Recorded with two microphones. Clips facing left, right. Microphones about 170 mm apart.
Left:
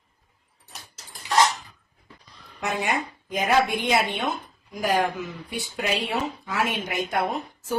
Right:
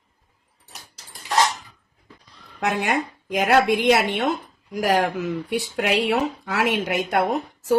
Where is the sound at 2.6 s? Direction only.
65° right (ahead or behind).